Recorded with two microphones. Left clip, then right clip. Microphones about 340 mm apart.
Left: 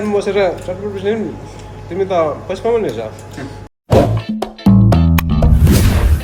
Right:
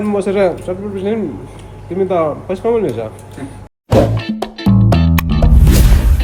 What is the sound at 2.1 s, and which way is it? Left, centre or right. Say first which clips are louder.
Speech: even; centre.